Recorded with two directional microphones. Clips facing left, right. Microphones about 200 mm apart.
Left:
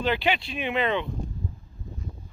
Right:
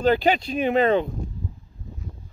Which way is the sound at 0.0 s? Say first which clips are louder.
Right 6 dB; 40° right (ahead or behind).